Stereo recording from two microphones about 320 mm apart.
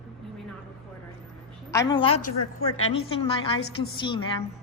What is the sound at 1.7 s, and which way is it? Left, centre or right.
Speech, centre.